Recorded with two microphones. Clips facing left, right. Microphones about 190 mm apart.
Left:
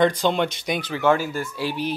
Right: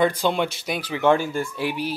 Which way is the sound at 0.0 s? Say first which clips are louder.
Left 1 dB; 10° right (ahead or behind).